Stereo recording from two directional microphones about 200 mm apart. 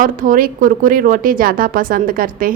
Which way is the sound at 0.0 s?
45° right (ahead or behind).